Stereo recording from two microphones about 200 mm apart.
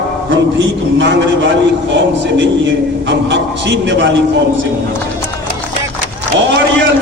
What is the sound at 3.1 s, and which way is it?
Speech, 60° right (ahead or behind).